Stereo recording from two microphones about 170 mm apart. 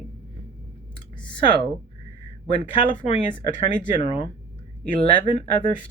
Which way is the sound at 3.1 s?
30° left (ahead or behind).